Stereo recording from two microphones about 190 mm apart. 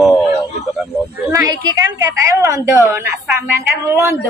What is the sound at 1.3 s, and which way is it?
A woman's voice, 15° right (ahead or behind).